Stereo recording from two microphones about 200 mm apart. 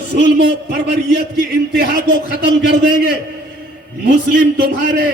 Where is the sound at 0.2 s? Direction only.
55° right (ahead or behind).